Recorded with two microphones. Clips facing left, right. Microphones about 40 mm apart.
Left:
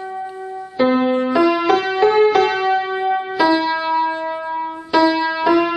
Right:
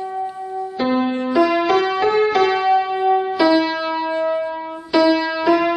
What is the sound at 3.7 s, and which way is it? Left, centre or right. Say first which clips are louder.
Music: left 3 dB; centre.